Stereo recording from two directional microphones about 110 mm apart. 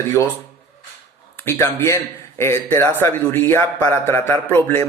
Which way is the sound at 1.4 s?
25° left (ahead or behind).